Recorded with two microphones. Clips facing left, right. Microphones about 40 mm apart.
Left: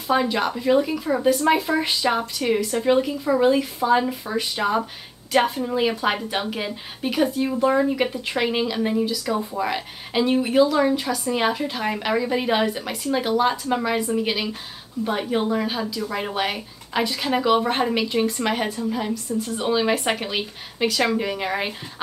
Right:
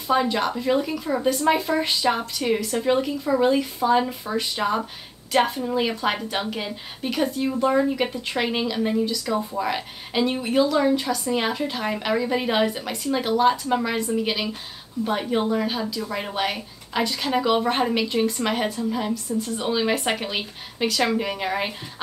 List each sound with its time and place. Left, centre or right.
0.1 s speech: centre